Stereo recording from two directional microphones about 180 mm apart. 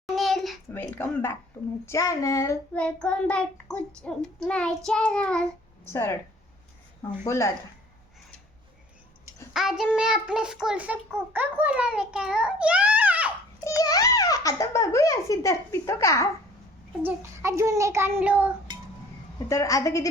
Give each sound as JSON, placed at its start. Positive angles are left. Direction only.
{"t": 0.0, "sound": "a sound", "side_deg": 0}
{"t": 0.7, "sound": "speech", "side_deg": 10}
{"t": 2.7, "sound": "child singing", "side_deg": 5}
{"t": 5.9, "sound": "speech", "side_deg": 15}
{"t": 9.5, "sound": "child singing", "side_deg": 0}
{"t": 13.7, "sound": "a child's voice", "side_deg": 20}
{"t": 17.0, "sound": "a child's voice", "side_deg": -15}
{"t": 19.5, "sound": "speech", "side_deg": 15}